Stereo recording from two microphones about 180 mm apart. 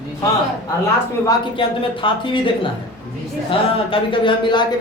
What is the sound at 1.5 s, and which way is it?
Speech, 30° left (ahead or behind).